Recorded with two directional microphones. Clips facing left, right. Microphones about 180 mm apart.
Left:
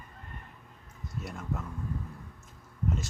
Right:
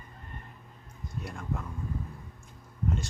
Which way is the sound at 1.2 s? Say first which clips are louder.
Even; 5° left (ahead or behind).